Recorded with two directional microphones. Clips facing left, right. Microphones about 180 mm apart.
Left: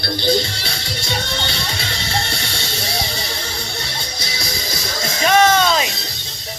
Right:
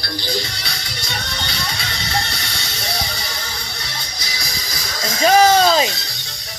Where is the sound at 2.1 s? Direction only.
25° left (ahead or behind).